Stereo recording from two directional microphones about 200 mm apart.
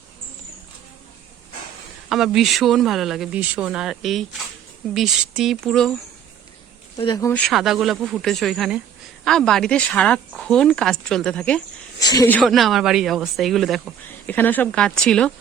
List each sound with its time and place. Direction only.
2.0 s speech: centre (ahead or behind)
6.9 s speech: 25° left (ahead or behind)
7.3 s speech: 5° left (ahead or behind)
11.9 s speech: 15° left (ahead or behind)
12.4 s speech: centre (ahead or behind)